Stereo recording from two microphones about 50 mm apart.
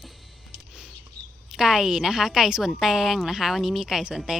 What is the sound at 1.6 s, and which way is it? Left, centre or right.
A woman's voice, centre.